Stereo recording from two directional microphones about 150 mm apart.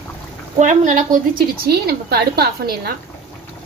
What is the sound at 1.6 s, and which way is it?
A woman's voice, 90° right.